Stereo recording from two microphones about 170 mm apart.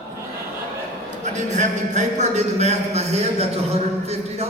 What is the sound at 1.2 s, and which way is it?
Speech, 45° right (ahead or behind).